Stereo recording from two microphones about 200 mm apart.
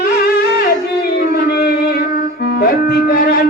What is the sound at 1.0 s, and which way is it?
Music, 50° left (ahead or behind).